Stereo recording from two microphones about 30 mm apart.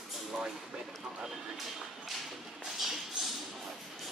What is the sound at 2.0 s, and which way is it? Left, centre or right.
Thump, centre.